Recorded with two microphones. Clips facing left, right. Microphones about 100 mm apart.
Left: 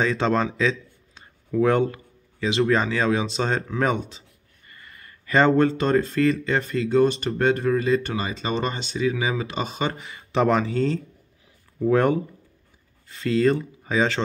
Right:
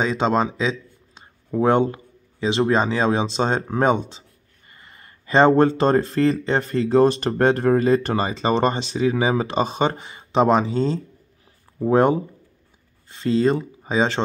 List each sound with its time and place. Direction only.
0.0 s speech: 20° right (ahead or behind)